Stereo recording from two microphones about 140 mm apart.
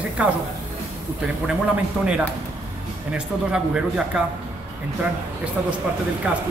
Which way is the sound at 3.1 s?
5° right (ahead or behind).